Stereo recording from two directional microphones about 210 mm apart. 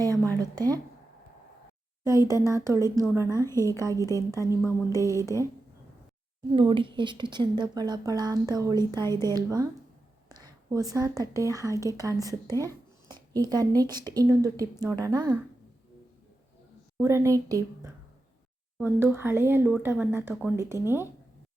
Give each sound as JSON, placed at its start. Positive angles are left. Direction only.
{"t": 0.0, "sound": "a sound", "side_deg": -15}
{"t": 2.2, "sound": "speech", "side_deg": -15}
{"t": 3.3, "sound": "a woman's voice", "side_deg": 15}
{"t": 3.7, "sound": "speech", "side_deg": -15}
{"t": 3.9, "sound": "a woman's voice", "side_deg": 15}
{"t": 4.3, "sound": "speech", "side_deg": -15}
{"t": 6.6, "sound": "a woman's voice", "side_deg": -25}
{"t": 10.4, "sound": "a sound", "side_deg": -15}
{"t": 11.2, "sound": "speech", "side_deg": -15}
{"t": 17.0, "sound": "speech", "side_deg": -15}